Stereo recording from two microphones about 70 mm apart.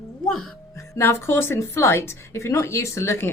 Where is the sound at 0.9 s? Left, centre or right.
Left.